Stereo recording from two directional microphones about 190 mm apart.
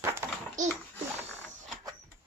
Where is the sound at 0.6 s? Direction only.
40° right (ahead or behind).